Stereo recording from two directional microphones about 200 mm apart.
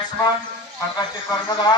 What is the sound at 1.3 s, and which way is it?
Speech, 20° left (ahead or behind).